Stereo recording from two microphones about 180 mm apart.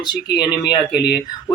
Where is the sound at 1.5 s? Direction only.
20° left (ahead or behind).